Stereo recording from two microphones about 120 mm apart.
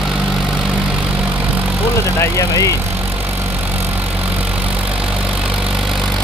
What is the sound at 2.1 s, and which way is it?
Vehicle, 25° left (ahead or behind).